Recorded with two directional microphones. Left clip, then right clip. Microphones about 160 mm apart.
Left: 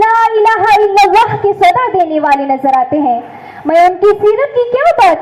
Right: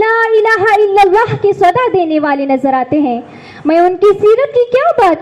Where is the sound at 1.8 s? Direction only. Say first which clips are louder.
Left 1 dB; 25° right (ahead or behind).